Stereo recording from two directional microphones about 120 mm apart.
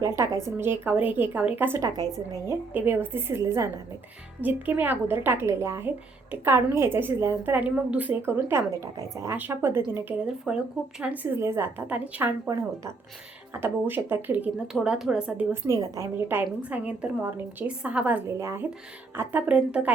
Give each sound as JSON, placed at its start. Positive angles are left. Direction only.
{"t": 0.0, "sound": "a woman's voice", "side_deg": -25}
{"t": 10.2, "sound": "a woman's voice", "side_deg": -5}
{"t": 13.5, "sound": "a woman's voice", "side_deg": -20}
{"t": 14.7, "sound": "a woman's voice", "side_deg": -5}
{"t": 15.7, "sound": "a woman's voice", "side_deg": -25}
{"t": 18.3, "sound": "a woman's voice", "side_deg": -25}